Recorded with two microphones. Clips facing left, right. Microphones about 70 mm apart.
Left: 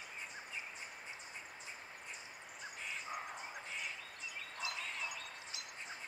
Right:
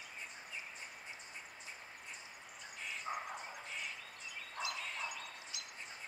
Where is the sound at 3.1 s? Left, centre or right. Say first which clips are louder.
Right 4 dB; right.